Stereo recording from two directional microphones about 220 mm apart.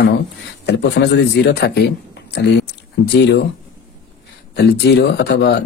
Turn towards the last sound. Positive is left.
turn(degrees=50)  # may be behind; listen again after turning